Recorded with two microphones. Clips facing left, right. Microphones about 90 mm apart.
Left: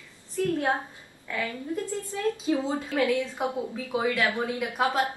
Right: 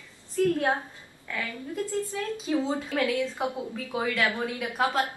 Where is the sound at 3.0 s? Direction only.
20° left (ahead or behind).